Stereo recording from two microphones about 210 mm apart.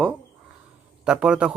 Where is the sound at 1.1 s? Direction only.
5° right (ahead or behind).